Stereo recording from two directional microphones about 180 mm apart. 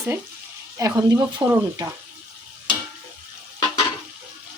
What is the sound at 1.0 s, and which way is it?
Speech, 20° right (ahead or behind).